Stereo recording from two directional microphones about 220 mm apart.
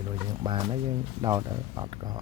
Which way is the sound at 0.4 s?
20° right (ahead or behind).